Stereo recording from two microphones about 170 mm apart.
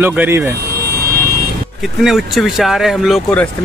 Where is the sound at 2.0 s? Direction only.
Centre (ahead or behind).